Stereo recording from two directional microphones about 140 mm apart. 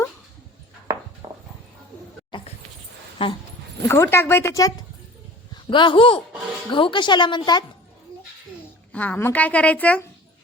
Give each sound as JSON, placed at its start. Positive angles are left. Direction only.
{"t": 2.3, "sound": "a sound", "side_deg": 35}
{"t": 3.2, "sound": "speech", "side_deg": 35}
{"t": 3.8, "sound": "a woman's voice", "side_deg": 20}
{"t": 5.7, "sound": "speech", "side_deg": 35}
{"t": 8.9, "sound": "a woman's voice", "side_deg": 10}